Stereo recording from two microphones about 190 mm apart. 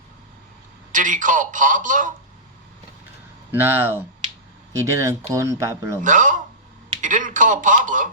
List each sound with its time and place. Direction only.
0.9 s speech: 45° right (ahead or behind)
3.5 s speech: 10° right (ahead or behind)
6.0 s speech: 45° right (ahead or behind)